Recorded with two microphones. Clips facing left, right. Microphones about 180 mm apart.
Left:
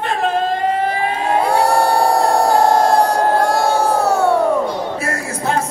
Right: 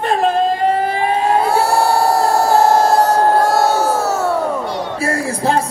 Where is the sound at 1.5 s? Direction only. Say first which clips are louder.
Even; 5° right (ahead or behind).